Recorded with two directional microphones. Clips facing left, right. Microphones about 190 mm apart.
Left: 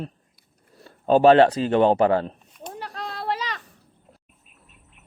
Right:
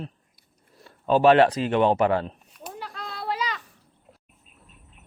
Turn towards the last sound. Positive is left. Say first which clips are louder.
# left 1 dB
turn(degrees=40)  # may be behind; listen again after turning